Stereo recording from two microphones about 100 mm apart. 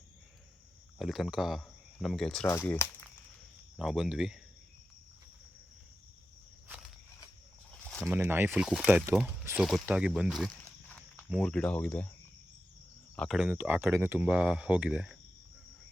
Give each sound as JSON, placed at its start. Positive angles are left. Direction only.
{"t": 0.9, "sound": "speech", "side_deg": 0}
{"t": 2.5, "sound": "speech", "side_deg": 25}
{"t": 3.8, "sound": "speech", "side_deg": -5}
{"t": 7.7, "sound": "a sound", "side_deg": 10}
{"t": 8.0, "sound": "speech", "side_deg": -25}
{"t": 8.5, "sound": "speech", "side_deg": -10}
{"t": 9.6, "sound": "speech", "side_deg": 0}
{"t": 9.8, "sound": "speech", "side_deg": -10}
{"t": 10.8, "sound": "walk", "side_deg": 15}
{"t": 11.4, "sound": "speech", "side_deg": 10}
{"t": 13.2, "sound": "speech", "side_deg": 10}
{"t": 13.5, "sound": "speech", "side_deg": -20}
{"t": 14.2, "sound": "speech", "side_deg": -10}